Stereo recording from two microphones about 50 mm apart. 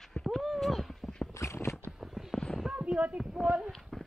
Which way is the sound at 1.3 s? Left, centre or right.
Left.